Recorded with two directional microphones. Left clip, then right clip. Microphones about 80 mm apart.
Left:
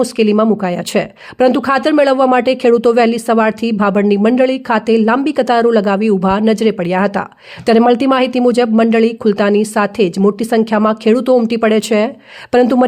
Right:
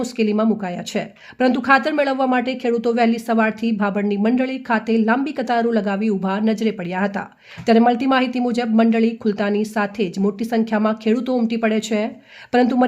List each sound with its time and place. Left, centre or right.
0.0 s a woman's voice: left
4.3 s a woman's voice: left